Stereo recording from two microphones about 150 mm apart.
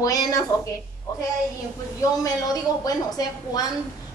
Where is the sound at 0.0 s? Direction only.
25° left (ahead or behind).